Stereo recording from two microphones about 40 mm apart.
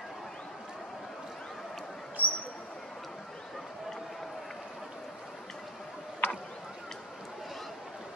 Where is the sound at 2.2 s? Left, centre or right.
Right.